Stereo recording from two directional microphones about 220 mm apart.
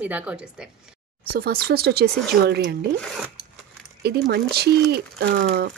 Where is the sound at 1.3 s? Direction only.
45° right (ahead or behind).